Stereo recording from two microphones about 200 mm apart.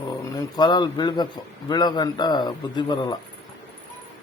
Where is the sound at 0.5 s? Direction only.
20° left (ahead or behind).